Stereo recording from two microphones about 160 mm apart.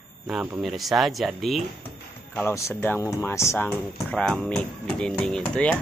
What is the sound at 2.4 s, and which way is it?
Speech, 15° left (ahead or behind).